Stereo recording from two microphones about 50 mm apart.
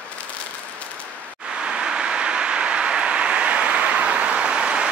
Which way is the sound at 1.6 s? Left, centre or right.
Centre.